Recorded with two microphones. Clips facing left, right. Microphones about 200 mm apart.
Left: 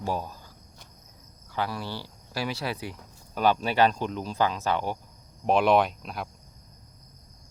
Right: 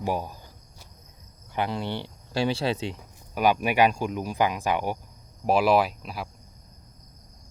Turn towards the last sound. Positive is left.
turn(degrees=-5)  # may be behind; listen again after turning